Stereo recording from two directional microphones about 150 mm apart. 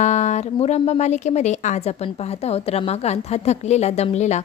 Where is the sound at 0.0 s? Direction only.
50° left (ahead or behind).